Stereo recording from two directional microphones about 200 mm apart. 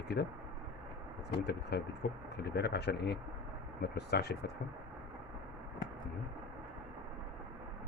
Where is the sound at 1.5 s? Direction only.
55° left (ahead or behind).